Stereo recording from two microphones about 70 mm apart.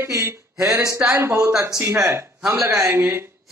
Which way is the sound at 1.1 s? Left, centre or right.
Right.